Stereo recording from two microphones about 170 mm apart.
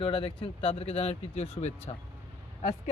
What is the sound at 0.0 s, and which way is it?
Speech, 30° left (ahead or behind).